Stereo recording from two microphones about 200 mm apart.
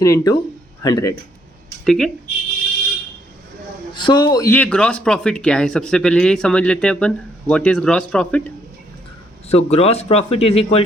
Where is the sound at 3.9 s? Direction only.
20° left (ahead or behind); by 8.4 s 5° left (ahead or behind).